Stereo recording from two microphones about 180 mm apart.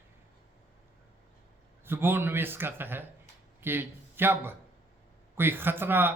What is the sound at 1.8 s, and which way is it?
A man's voice, 10° right (ahead or behind).